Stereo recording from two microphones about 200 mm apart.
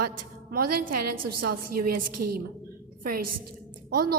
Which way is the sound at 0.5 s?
45° right (ahead or behind).